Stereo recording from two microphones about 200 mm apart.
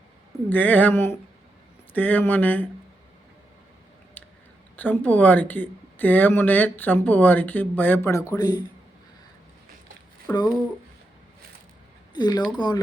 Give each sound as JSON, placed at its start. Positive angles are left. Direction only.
{"t": 0.5, "sound": "speech", "side_deg": 10}
{"t": 4.2, "sound": "a sound", "side_deg": 10}
{"t": 4.8, "sound": "a man's voice", "side_deg": 10}
{"t": 10.3, "sound": "a man's voice", "side_deg": 20}
{"t": 12.1, "sound": "a man's voice", "side_deg": 20}